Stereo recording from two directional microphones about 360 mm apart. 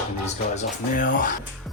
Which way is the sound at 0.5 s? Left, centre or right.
Left.